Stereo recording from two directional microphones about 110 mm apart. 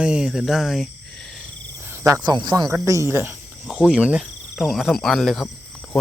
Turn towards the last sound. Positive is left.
turn(degrees=0)  # may be behind; listen again after turning